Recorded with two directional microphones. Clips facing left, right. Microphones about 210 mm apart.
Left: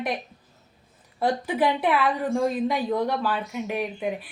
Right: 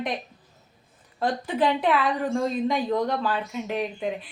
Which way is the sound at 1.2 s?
10° left (ahead or behind).